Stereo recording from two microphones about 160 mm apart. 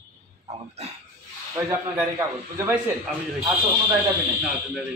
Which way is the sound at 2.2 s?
20° right (ahead or behind).